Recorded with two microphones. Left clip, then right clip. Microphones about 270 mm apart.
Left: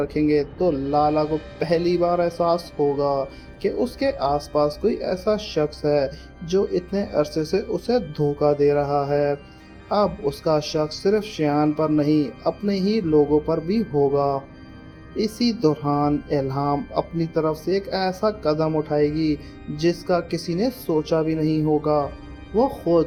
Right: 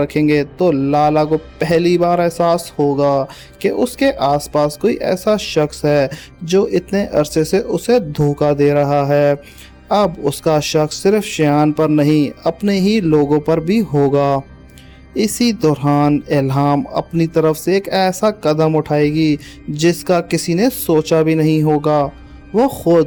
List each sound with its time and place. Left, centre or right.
0.0 s speech: right